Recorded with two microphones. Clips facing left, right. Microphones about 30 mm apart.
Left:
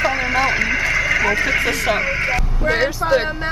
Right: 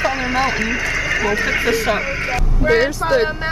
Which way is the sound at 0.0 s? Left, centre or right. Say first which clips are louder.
Left 1 dB; centre.